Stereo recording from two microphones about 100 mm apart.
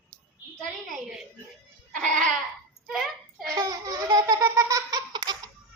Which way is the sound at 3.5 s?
40° right (ahead or behind).